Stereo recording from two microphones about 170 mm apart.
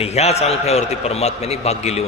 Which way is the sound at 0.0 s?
40° left (ahead or behind).